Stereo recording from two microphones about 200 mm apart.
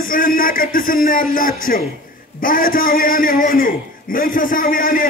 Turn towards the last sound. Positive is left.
turn(degrees=45)  # may be behind; listen again after turning